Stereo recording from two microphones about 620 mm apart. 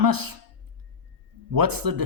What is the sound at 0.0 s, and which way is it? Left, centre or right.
Speech, right.